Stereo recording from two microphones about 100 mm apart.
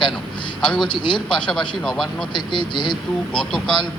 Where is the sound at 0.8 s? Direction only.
50° left (ahead or behind).